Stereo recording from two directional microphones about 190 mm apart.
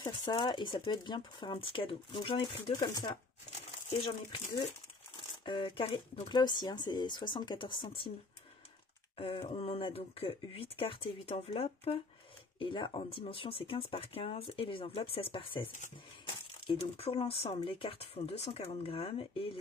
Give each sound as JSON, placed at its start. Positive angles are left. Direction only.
{"t": 0.0, "sound": "speech", "side_deg": 20}
{"t": 5.4, "sound": "speech", "side_deg": 25}
{"t": 9.2, "sound": "speech", "side_deg": 25}
{"t": 16.6, "sound": "speech", "side_deg": 30}